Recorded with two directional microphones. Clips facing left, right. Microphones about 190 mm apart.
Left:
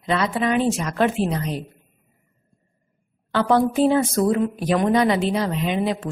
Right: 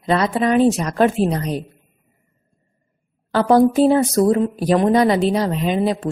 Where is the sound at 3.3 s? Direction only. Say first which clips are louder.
Right 5 dB; 40° right (ahead or behind).